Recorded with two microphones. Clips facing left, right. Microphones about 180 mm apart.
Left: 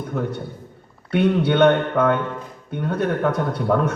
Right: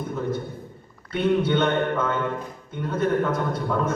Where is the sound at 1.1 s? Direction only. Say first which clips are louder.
Left 3 dB; 65° left (ahead or behind).